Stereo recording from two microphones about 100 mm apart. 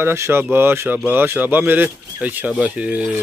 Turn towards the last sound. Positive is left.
turn(degrees=-15)  # may be behind; listen again after turning